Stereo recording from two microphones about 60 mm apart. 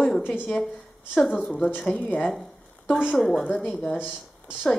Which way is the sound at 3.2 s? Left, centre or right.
Centre.